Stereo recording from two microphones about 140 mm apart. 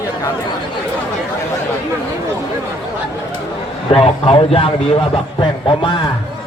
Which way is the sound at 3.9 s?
45° left (ahead or behind).